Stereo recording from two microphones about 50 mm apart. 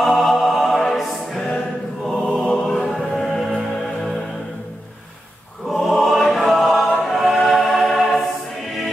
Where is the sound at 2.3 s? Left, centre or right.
Centre.